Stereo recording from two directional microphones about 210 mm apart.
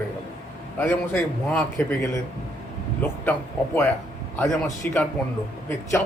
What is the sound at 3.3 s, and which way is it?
A man's voice, 10° left (ahead or behind).